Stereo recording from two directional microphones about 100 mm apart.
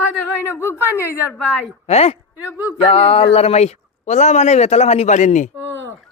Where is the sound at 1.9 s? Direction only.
90° left.